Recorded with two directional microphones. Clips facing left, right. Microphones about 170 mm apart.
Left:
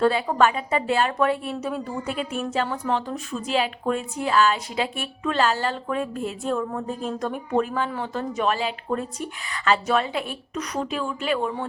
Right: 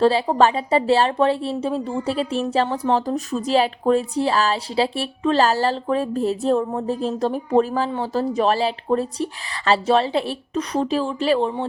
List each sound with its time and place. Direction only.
0.0 s speech: 30° right (ahead or behind)